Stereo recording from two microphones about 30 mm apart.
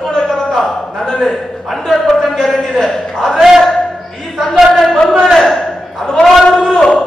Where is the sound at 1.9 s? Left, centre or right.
Centre.